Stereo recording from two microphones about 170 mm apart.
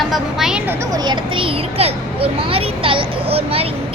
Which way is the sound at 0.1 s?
Centre (ahead or behind).